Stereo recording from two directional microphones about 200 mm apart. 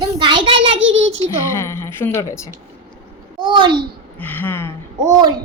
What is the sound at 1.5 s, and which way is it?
Speech, 15° left (ahead or behind).